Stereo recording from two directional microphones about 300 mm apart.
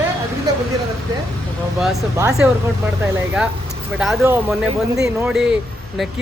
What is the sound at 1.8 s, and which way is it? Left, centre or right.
Speech, centre.